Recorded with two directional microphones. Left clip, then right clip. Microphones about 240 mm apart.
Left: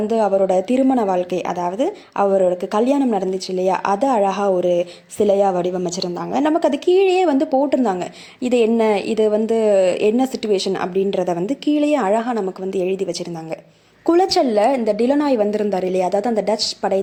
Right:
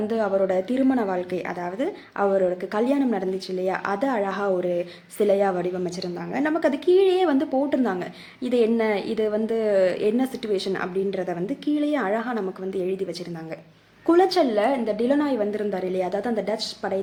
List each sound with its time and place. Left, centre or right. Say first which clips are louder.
0.1 s a woman's voice: left 7 dB; centre
14.1 s a woman's voice: left 4 dB; left